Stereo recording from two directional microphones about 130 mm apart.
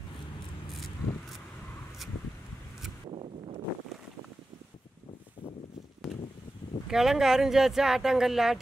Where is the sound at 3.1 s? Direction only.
45° right (ahead or behind).